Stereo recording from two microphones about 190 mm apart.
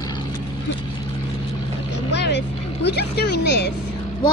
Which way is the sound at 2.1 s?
65° left (ahead or behind).